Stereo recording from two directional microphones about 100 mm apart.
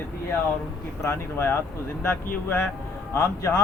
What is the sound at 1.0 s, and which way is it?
Speech, 25° left (ahead or behind).